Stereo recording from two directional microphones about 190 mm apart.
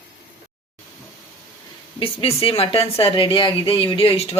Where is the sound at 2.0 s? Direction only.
30° left (ahead or behind).